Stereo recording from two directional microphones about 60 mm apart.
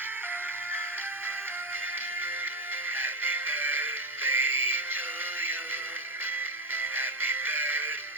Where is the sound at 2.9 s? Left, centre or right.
Right.